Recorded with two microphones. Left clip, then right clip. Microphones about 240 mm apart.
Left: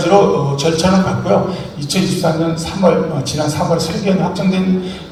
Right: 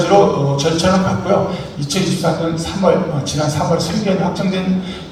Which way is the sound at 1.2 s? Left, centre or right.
Left.